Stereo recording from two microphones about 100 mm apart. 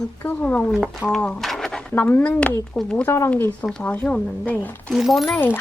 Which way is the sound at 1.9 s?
20° left (ahead or behind).